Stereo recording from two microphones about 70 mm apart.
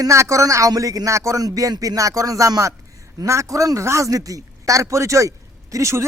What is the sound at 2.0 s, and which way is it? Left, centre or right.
Speech, right.